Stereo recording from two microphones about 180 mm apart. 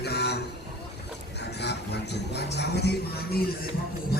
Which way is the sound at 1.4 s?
70° left (ahead or behind).